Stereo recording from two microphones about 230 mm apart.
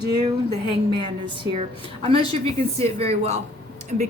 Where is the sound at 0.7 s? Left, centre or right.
Right.